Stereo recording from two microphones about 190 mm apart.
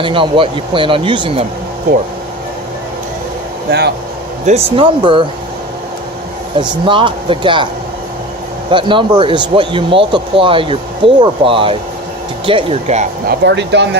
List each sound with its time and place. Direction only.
0.0 s speech: 25° right (ahead or behind)
3.7 s speech: 60° right (ahead or behind)
4.4 s speech: 30° right (ahead or behind)
6.6 s speech: 25° right (ahead or behind)
8.7 s speech: 25° right (ahead or behind)
13.2 s speech: 65° right (ahead or behind)